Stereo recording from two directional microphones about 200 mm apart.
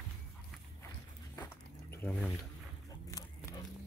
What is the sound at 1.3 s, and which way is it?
Dog, 10° left (ahead or behind).